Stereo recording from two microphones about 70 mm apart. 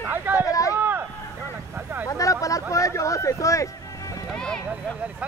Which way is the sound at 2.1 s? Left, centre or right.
Left.